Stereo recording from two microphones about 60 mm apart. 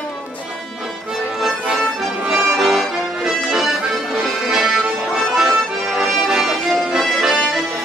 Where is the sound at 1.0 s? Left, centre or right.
Centre.